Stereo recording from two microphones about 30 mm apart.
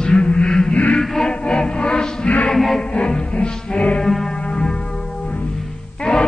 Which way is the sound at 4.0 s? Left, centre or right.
Centre.